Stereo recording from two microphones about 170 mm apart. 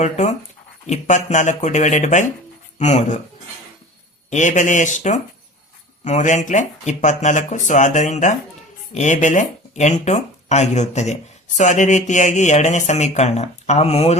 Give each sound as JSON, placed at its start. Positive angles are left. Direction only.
{"t": 0.0, "sound": "speech", "side_deg": 40}
{"t": 4.3, "sound": "speech", "side_deg": 45}